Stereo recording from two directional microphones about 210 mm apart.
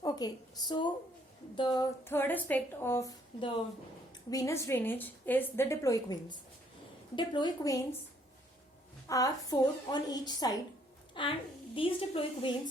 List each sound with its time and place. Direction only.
0.0 s a woman's voice: 20° left (ahead or behind)
2.0 s a woman's voice: 10° left (ahead or behind)
9.0 s a woman's voice: 15° left (ahead or behind)